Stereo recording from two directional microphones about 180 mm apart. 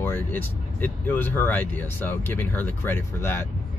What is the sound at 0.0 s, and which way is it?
Speech, 10° left (ahead or behind).